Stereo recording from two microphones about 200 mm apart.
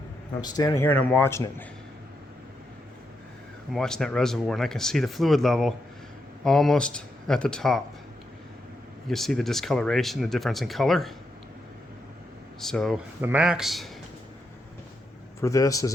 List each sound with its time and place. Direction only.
0.4 s speech: 20° left (ahead or behind)
3.7 s speech: 5° left (ahead or behind)
9.0 s speech: centre (ahead or behind)
12.5 s speech: centre (ahead or behind)
15.4 s speech: 15° left (ahead or behind)